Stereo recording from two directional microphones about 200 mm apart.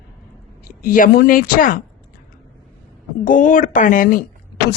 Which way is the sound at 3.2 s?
40° left (ahead or behind).